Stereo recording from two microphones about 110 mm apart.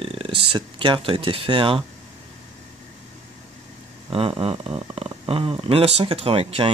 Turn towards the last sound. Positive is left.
turn(degrees=-65)  # may be behind; listen again after turning